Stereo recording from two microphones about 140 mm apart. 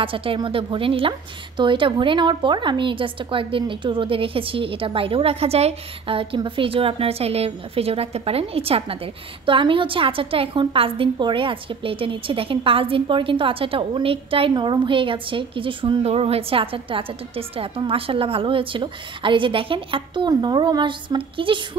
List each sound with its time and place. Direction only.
0.0 s a woman's voice: 40° right (ahead or behind)